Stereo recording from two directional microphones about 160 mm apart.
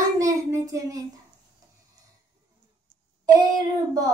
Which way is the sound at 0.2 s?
20° right (ahead or behind).